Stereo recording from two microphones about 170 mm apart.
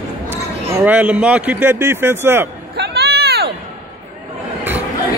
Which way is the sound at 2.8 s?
70° right (ahead or behind).